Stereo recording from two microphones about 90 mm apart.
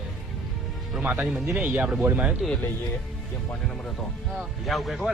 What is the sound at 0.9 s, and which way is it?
Speech, 5° right (ahead or behind).